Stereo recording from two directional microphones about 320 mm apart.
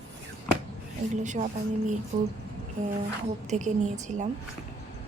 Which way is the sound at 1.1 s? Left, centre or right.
Right.